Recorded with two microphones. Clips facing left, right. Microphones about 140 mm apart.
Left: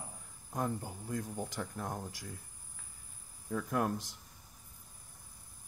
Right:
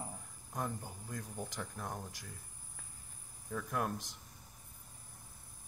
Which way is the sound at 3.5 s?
10° left (ahead or behind).